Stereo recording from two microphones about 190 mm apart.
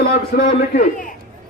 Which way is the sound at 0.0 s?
55° left (ahead or behind).